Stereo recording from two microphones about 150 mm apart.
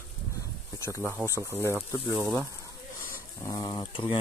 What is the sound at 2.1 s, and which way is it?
Speech, 15° right (ahead or behind).